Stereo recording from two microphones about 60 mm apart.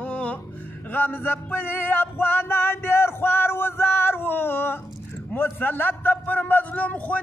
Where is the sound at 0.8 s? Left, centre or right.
Left.